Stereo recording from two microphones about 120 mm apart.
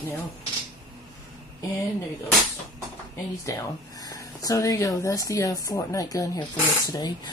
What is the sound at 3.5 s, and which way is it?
Speech, 30° left (ahead or behind).